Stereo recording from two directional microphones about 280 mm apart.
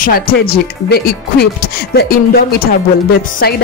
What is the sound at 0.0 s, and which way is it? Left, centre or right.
Speech, left.